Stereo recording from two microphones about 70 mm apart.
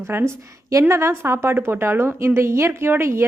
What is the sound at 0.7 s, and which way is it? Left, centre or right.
A woman's voice, right.